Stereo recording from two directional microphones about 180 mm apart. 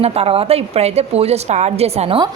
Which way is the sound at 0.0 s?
35° right (ahead or behind).